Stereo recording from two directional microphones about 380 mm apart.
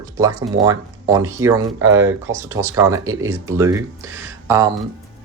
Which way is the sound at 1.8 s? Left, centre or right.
Right.